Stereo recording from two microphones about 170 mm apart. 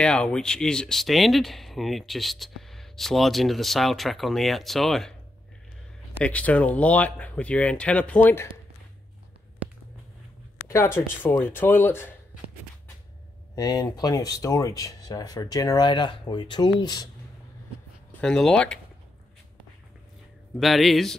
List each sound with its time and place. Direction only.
0.0 s speech: 5° left (ahead or behind)
6.2 s speech: 10° left (ahead or behind)
11.0 s speech: 10° left (ahead or behind)
13.6 s speech: 20° left (ahead or behind)
18.2 s speech: 5° left (ahead or behind)
20.5 s speech: centre (ahead or behind)